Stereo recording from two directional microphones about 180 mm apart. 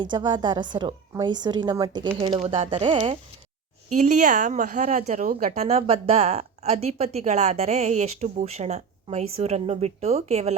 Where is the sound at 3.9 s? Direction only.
45° right (ahead or behind).